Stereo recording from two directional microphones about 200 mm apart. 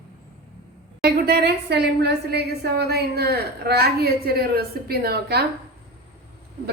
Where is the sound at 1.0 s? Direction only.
50° right (ahead or behind).